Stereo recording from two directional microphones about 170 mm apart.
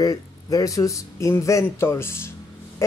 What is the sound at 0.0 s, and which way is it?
Speech, 20° left (ahead or behind).